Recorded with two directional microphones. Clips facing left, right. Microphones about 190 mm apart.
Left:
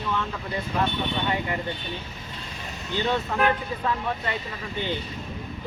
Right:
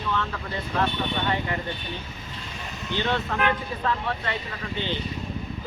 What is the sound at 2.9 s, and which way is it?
Speech, 10° left (ahead or behind).